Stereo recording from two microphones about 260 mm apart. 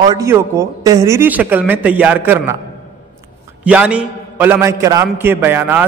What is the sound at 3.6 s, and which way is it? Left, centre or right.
A man's voice, centre.